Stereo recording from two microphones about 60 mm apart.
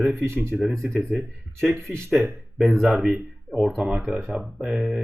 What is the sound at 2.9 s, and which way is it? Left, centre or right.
Speech, centre.